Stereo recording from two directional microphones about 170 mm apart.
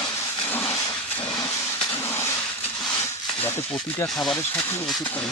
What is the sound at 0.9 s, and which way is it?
Hiss, 20° left (ahead or behind).